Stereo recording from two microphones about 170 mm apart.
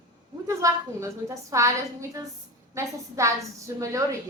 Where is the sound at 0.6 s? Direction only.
20° right (ahead or behind).